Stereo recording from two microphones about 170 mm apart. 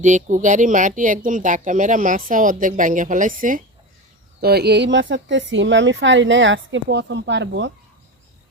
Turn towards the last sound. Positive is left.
turn(degrees=-90)